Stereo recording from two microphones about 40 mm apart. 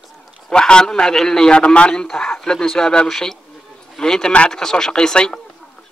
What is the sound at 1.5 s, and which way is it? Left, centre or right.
Speech, left.